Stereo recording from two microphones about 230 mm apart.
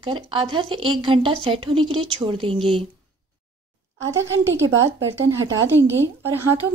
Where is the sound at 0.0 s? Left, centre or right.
Right.